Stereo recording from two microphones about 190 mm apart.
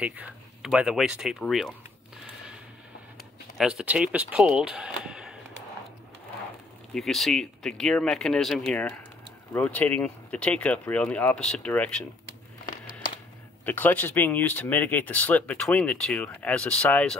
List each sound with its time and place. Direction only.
0.0 s speech: 5° right (ahead or behind)
3.5 s speech: 5° right (ahead or behind)
6.9 s speech: centre (ahead or behind)
13.7 s speech: 10° left (ahead or behind)